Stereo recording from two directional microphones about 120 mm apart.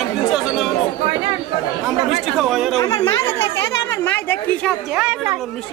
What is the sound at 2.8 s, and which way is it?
Speech, 25° left (ahead or behind).